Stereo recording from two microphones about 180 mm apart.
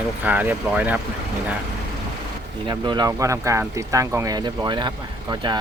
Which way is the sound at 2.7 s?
25° right (ahead or behind).